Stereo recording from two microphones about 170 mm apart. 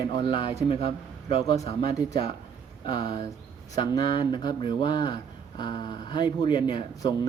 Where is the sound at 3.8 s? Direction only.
30° left (ahead or behind).